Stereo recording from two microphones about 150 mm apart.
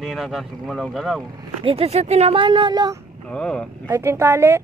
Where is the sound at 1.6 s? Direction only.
40° right (ahead or behind).